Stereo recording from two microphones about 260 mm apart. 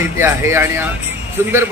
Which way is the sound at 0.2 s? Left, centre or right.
Centre.